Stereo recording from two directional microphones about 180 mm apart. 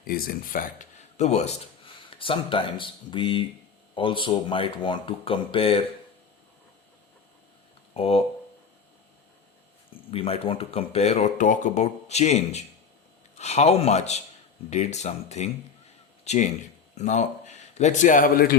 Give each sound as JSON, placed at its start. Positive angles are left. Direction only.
{"t": 0.0, "sound": "speech", "side_deg": 55}
{"t": 7.9, "sound": "speech", "side_deg": 30}
{"t": 10.1, "sound": "a man's voice", "side_deg": 30}